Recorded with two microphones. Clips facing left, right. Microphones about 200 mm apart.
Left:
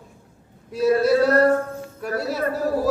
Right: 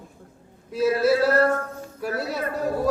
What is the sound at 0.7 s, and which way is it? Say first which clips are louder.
A man's voice: left 2 dB; centre (ahead or behind).